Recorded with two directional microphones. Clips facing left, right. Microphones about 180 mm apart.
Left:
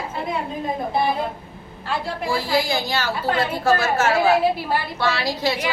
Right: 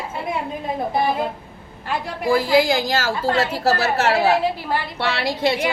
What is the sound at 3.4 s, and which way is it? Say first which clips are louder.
Speech: left 2 dB; 80° right.